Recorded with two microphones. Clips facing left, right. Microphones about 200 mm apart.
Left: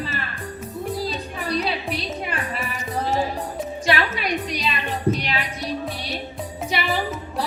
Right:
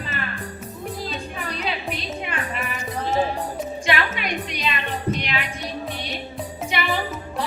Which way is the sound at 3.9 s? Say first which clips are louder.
Left 3 dB; 35° left (ahead or behind).